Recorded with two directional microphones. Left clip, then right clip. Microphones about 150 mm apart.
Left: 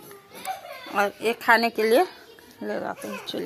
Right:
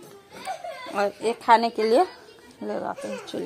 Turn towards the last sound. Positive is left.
turn(degrees=-5)  # may be behind; listen again after turning